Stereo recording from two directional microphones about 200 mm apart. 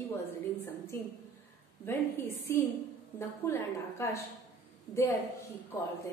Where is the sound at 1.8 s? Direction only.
10° left (ahead or behind).